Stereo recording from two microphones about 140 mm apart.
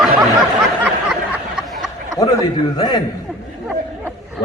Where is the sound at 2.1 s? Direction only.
35° left (ahead or behind).